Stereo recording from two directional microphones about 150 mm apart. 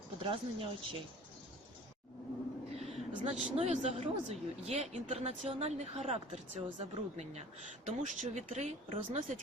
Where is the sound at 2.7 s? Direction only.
45° right (ahead or behind).